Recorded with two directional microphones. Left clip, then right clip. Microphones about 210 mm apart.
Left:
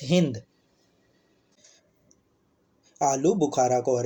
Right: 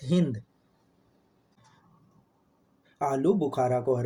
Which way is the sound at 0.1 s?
20° left (ahead or behind).